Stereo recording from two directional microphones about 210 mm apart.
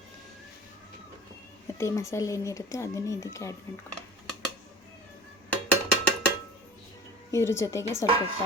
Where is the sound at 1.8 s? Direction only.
15° left (ahead or behind).